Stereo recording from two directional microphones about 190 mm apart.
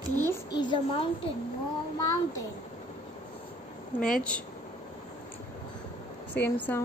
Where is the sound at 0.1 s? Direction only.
10° left (ahead or behind).